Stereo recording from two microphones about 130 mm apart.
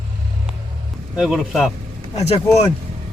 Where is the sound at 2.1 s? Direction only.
55° left (ahead or behind).